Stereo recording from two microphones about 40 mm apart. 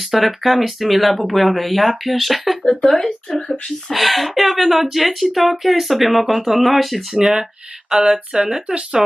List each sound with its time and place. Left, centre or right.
0.0 s speech: centre
7.9 s a sound: centre
8.6 s speech: right